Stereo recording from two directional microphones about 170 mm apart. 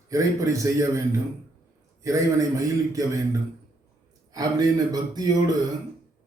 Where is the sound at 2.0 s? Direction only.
20° right (ahead or behind).